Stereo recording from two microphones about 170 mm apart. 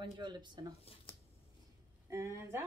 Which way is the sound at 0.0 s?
25° right (ahead or behind).